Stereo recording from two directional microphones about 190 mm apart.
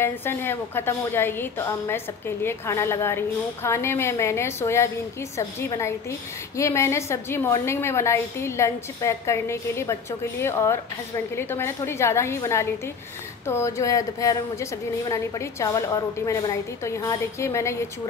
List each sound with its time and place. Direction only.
0.0 s a woman's voice: 10° left (ahead or behind)